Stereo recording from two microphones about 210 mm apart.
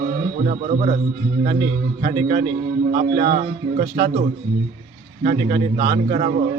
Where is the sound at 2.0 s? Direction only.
35° right (ahead or behind).